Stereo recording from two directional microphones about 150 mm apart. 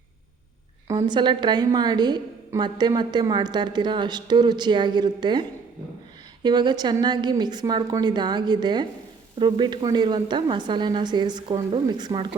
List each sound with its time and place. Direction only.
0.9 s a woman's voice: 30° right (ahead or behind)